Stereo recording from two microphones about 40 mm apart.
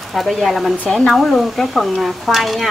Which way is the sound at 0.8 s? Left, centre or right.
Centre.